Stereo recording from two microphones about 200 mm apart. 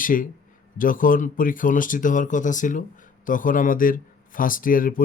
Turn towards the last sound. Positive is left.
turn(degrees=45)  # may be behind; listen again after turning